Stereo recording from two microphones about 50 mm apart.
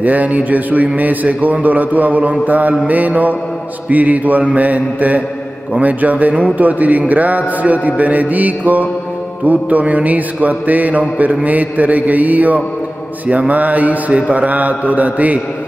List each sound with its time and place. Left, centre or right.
0.0 s music: right